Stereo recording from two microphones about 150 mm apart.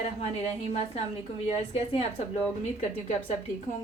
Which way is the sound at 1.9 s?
45° left (ahead or behind).